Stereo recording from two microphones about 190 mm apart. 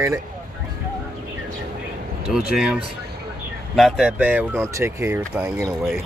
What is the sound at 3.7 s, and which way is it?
Speech, centre (ahead or behind).